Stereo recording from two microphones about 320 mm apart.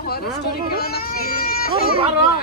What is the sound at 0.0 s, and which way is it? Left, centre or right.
Speech, left.